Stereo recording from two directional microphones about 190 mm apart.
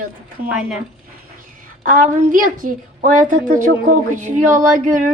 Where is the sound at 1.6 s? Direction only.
45° right (ahead or behind).